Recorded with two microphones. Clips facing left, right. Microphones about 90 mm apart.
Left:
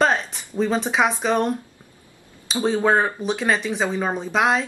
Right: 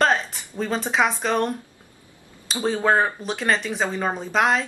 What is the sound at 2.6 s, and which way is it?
A woman's voice, centre (ahead or behind).